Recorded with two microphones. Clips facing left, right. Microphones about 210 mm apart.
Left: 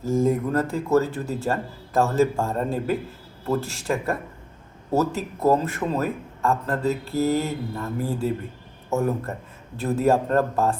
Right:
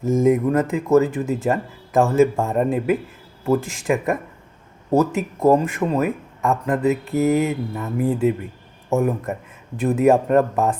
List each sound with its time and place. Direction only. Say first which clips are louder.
0.0 s speech: right 5 dB; 20° right (ahead or behind)